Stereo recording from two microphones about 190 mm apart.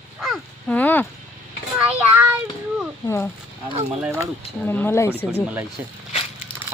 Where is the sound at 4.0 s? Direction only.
10° right (ahead or behind).